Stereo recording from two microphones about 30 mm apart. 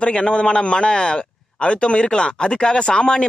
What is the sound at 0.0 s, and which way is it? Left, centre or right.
Speech, left.